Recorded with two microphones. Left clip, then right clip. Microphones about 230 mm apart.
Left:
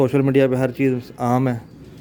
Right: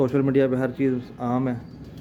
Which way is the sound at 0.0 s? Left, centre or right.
Left.